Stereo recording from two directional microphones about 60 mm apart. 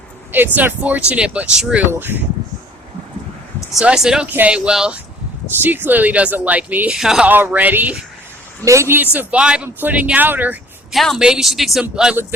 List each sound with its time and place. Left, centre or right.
0.3 s speech: right; by 1.8 s centre
1.9 s speech: right
3.8 s speech: centre
5.5 s speech: right
6.9 s speech: centre
7.3 s speech: right
8.6 s a woman's voice: right
9.1 s speech: centre
10.9 s speech: centre